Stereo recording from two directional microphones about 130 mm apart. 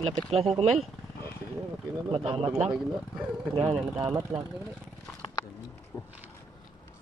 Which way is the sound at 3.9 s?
20° right (ahead or behind).